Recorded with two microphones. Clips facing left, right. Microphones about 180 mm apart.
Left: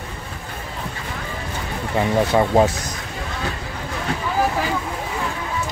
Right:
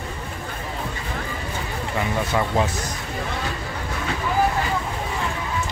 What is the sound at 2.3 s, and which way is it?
Speech, 40° left (ahead or behind).